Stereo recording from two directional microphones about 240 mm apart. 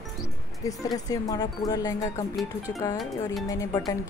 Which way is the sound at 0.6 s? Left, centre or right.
Centre.